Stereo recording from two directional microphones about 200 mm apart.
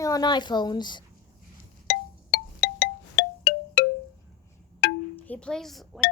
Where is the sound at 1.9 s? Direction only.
60° left (ahead or behind).